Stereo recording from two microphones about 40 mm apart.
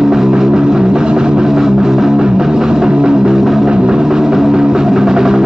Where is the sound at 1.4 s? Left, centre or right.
Centre.